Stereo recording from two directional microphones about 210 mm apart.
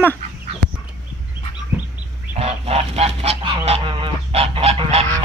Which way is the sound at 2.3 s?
30° right (ahead or behind).